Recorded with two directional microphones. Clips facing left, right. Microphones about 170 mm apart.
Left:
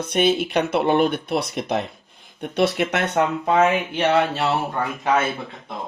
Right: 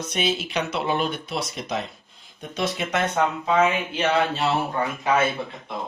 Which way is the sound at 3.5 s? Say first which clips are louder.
Left 3 dB; 45° left (ahead or behind).